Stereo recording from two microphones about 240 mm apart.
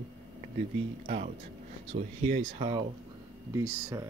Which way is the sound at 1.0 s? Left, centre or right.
Right.